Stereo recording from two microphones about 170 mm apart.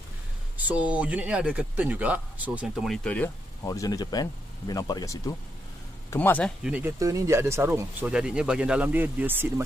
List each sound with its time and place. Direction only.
0.6 s speech: 10° right (ahead or behind); by 3.3 s 5° left (ahead or behind)
3.6 s speech: 20° left (ahead or behind)
6.6 s speech: 10° right (ahead or behind)
8.1 s speech: 5° right (ahead or behind)